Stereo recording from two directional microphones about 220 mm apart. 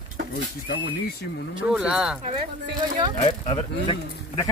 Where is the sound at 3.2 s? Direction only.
25° left (ahead or behind).